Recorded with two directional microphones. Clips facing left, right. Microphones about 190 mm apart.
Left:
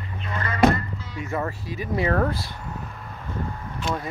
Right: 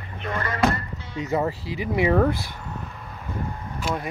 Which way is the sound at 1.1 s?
20° right (ahead or behind).